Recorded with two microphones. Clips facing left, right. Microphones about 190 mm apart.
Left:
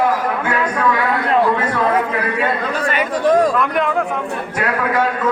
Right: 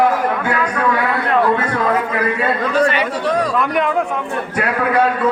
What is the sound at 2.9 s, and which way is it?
Chatter, 45° left (ahead or behind).